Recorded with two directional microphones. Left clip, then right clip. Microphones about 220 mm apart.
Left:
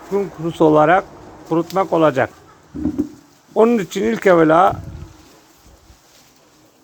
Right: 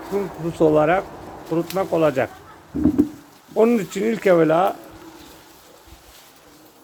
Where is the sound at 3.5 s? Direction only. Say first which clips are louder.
Left 3 dB; 15° left (ahead or behind).